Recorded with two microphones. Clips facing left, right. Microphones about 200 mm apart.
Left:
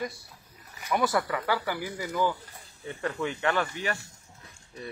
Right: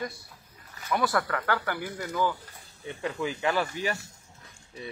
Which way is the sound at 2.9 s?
Centre (ahead or behind).